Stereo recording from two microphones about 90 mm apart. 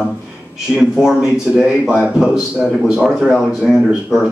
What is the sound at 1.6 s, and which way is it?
Speech, 15° right (ahead or behind).